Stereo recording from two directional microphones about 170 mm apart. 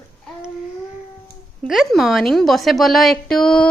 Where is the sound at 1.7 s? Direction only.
Centre (ahead or behind).